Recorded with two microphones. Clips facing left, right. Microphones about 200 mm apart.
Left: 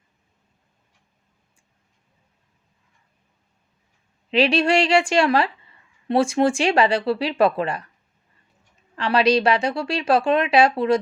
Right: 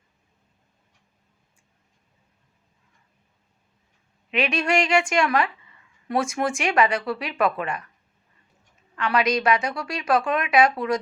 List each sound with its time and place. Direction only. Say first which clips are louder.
4.3 s a woman's voice: left 5 dB; 30° left (ahead or behind)
9.0 s speech: left 4 dB; 30° left (ahead or behind)